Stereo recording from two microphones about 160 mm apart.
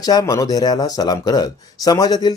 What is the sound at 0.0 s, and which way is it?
Speech, 25° left (ahead or behind).